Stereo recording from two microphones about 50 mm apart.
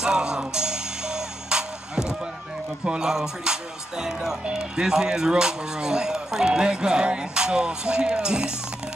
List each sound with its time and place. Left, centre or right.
0.0 s music: centre
2.8 s speech: centre